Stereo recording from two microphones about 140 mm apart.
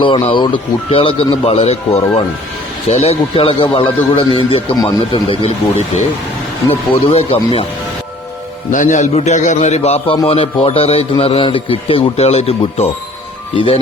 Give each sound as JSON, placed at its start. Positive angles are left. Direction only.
{"t": 0.0, "sound": "speech", "side_deg": 35}
{"t": 6.7, "sound": "speech", "side_deg": 45}
{"t": 8.7, "sound": "a man's voice", "side_deg": 65}